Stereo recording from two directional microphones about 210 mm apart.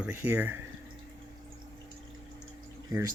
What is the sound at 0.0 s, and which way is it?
Speech, 10° right (ahead or behind).